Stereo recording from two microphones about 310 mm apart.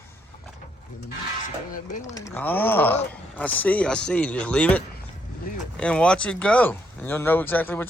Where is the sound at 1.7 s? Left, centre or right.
Left.